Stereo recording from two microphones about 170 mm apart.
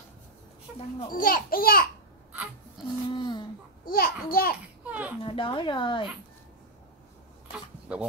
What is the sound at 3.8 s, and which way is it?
Speech, 60° left (ahead or behind).